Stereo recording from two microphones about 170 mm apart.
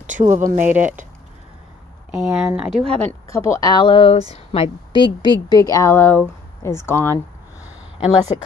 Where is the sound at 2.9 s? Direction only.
15° left (ahead or behind).